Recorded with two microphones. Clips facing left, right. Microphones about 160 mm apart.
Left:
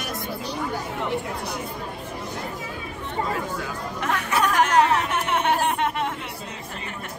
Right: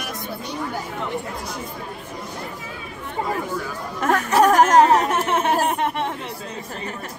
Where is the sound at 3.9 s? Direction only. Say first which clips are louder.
Right 7 dB; 45° right (ahead or behind).